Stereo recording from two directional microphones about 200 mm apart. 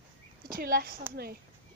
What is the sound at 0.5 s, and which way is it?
Speech, 50° right (ahead or behind).